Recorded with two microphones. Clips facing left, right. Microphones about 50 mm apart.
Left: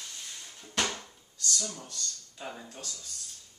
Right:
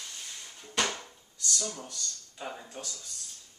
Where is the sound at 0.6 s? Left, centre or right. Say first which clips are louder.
Right 1 dB; centre.